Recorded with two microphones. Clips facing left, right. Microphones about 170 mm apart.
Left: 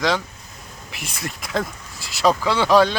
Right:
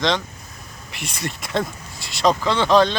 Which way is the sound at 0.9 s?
Centre (ahead or behind).